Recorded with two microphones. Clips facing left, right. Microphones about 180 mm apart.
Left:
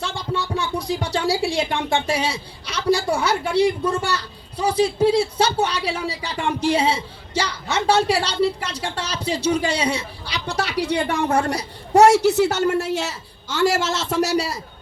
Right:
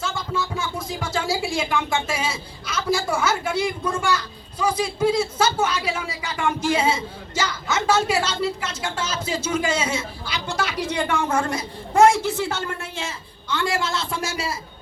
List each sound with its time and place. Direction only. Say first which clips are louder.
0.0 s speech: left 1 dB; 35° left (ahead or behind)
12.0 s a woman's voice: left 4 dB; 75° left (ahead or behind)
13.7 s speech: left 5 dB; 40° left (ahead or behind)